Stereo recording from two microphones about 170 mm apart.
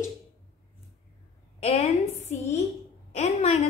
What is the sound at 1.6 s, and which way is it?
A woman's voice, 40° left (ahead or behind).